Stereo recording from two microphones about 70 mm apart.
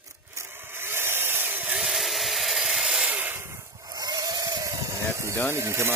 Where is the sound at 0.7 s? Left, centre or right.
Right.